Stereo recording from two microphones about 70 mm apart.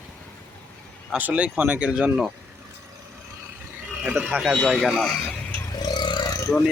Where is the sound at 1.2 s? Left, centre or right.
Right.